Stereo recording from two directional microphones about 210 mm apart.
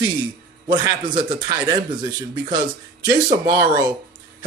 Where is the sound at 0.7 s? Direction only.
20° right (ahead or behind).